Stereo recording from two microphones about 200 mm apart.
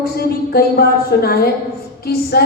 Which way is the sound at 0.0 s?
50° left (ahead or behind).